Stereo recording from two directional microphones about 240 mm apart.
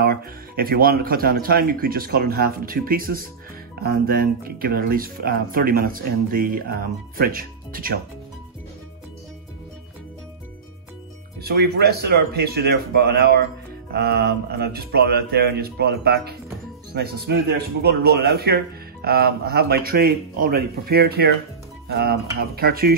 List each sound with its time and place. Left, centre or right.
0.0 s speech: right
11.4 s speech: right